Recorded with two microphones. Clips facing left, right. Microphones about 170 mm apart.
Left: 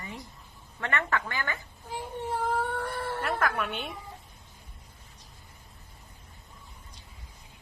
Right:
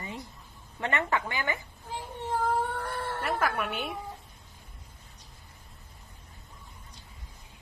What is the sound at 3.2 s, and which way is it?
Speech, 5° right (ahead or behind).